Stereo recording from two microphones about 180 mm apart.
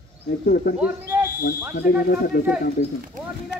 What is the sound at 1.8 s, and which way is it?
Speech, 55° left (ahead or behind).